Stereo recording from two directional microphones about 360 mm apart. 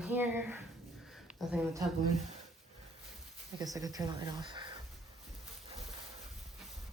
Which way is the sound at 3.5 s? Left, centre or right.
Centre.